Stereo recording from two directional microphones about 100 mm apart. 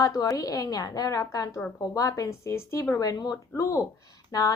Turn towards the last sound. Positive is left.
turn(degrees=40)  # may be behind; listen again after turning